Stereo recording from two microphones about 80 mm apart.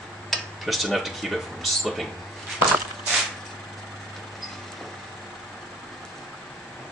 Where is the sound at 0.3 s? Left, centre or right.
Centre.